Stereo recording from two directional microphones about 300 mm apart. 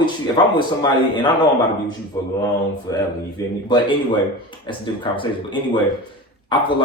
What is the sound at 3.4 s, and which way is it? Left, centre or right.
Speech, centre.